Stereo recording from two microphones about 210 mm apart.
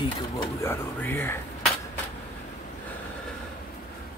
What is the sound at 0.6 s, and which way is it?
Speech, 10° left (ahead or behind).